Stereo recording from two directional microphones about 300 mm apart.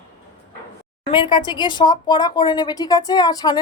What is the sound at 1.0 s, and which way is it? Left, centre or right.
Speech, centre.